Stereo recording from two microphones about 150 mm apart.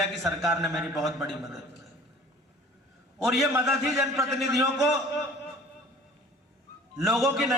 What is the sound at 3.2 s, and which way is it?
A man's voice, centre (ahead or behind).